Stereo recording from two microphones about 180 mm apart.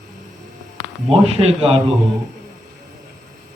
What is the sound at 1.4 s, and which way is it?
Speech, 30° right (ahead or behind).